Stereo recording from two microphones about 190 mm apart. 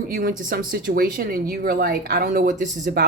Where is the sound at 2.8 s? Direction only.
60° right (ahead or behind).